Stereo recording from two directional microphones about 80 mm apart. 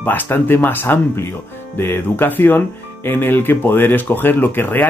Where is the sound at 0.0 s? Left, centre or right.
Left.